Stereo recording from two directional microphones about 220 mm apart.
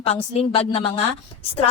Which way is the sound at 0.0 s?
25° left (ahead or behind).